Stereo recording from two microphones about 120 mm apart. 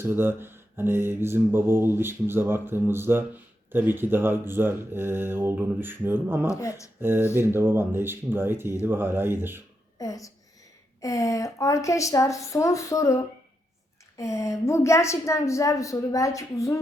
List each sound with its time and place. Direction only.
0.0 s mantra: 20° right (ahead or behind)
6.5 s a woman's voice: 25° left (ahead or behind)
7.0 s mantra: 20° right (ahead or behind)
10.0 s a woman's voice: 30° left (ahead or behind)